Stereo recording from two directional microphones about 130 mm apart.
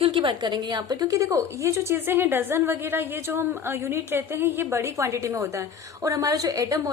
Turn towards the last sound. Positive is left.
turn(degrees=-25)  # may be behind; listen again after turning